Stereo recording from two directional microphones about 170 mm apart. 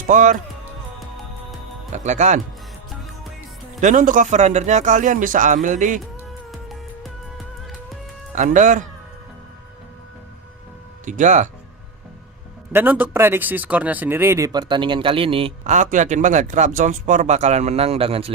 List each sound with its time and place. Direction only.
0.1 s a man's voice: 50° right (ahead or behind)
0.9 s music: centre (ahead or behind)
1.9 s speech: 45° right (ahead or behind)
3.8 s a man's voice: 50° right (ahead or behind)
6.5 s music: centre (ahead or behind)
8.4 s a man's voice: 50° right (ahead or behind)
11.0 s speech: 45° right (ahead or behind)
12.7 s speech: 10° right (ahead or behind); by 15.5 s 30° right (ahead or behind)
15.6 s a man's voice: 50° right (ahead or behind)